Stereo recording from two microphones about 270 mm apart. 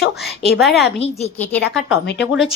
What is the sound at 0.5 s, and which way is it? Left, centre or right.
Speech, centre.